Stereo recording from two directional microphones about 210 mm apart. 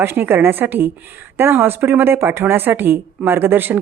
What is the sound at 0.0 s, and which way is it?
A woman's voice, 10° right (ahead or behind).